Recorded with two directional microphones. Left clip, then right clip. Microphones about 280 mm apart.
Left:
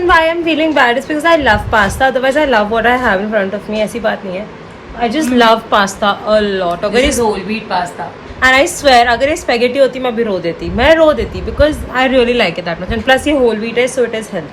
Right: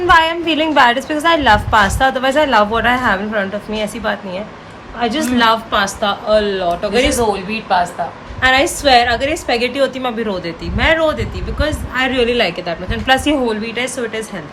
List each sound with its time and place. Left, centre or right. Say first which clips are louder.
0.1 s a woman's voice: even; centre
5.8 s a woman's voice: left 4 dB; centre
7.7 s a woman's voice: right 2 dB; centre
8.4 s a woman's voice: left 3 dB; centre
9.7 s a woman's voice: left 5 dB; centre; by 13.0 s left
13.1 s a woman's voice: left 4 dB; centre